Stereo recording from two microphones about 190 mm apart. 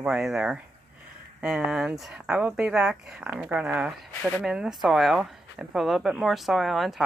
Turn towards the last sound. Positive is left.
turn(degrees=0)  # may be behind; listen again after turning